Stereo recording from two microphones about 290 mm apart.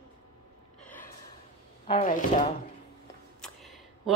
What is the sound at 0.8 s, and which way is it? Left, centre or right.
Gasp, centre.